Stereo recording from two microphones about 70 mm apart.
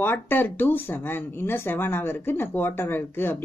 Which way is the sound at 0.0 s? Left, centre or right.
Left.